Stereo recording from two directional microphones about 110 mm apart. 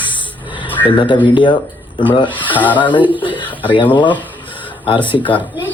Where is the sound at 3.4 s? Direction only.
15° left (ahead or behind).